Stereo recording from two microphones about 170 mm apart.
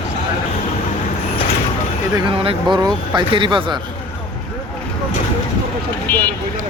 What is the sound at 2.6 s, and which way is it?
Speech, centre (ahead or behind).